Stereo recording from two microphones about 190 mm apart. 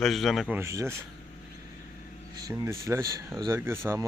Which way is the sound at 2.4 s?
15° right (ahead or behind).